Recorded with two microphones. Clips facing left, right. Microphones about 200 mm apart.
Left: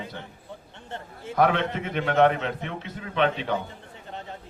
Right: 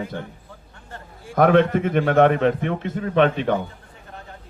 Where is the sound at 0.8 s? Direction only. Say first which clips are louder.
Left 3 dB; 25° left (ahead or behind).